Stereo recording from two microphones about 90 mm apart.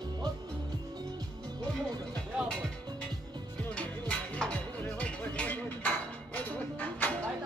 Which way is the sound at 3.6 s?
15° left (ahead or behind).